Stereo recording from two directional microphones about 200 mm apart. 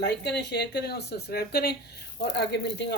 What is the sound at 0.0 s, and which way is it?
Speech, 55° left (ahead or behind).